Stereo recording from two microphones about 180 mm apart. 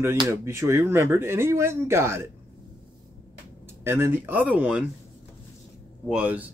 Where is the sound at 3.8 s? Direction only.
15° right (ahead or behind).